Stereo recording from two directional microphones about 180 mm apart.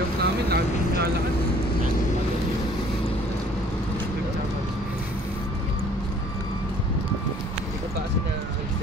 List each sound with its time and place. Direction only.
0.2 s vehicle: 60° right (ahead or behind)